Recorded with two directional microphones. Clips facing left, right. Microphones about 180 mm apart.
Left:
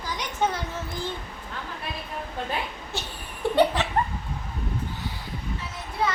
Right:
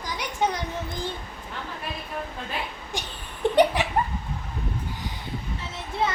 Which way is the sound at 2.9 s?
15° right (ahead or behind).